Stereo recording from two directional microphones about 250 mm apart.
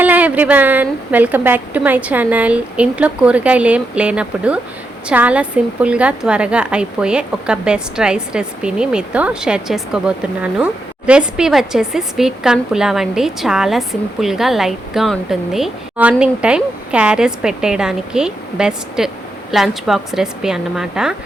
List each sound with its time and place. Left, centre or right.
0.0 s a woman's voice: centre